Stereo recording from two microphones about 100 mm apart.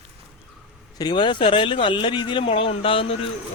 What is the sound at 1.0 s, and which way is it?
Speech, 55° left (ahead or behind).